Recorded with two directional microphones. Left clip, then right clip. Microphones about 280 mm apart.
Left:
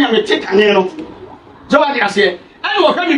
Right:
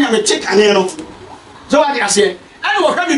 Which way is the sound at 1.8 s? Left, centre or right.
Centre.